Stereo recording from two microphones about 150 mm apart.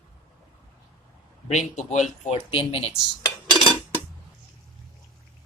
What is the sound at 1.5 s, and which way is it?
Speech, 50° left (ahead or behind).